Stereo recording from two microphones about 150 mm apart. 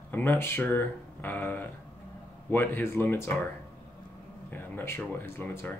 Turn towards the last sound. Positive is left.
turn(degrees=15)  # may be behind; listen again after turning